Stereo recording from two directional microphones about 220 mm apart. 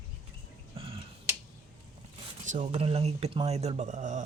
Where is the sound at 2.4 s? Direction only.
35° right (ahead or behind).